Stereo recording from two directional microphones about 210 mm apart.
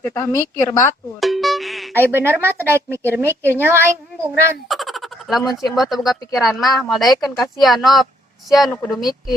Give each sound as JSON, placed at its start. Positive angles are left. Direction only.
{"t": 0.0, "sound": "a woman's voice", "side_deg": 10}
{"t": 1.2, "sound": "music", "side_deg": 0}
{"t": 1.9, "sound": "a woman's voice", "side_deg": -10}
{"t": 4.7, "sound": "frog", "side_deg": 0}
{"t": 5.7, "sound": "speech", "side_deg": 0}
{"t": 6.7, "sound": "a woman's voice", "side_deg": 15}
{"t": 6.9, "sound": "speech", "side_deg": 0}